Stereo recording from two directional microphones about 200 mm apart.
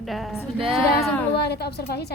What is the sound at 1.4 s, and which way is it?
Speech, 55° left (ahead or behind).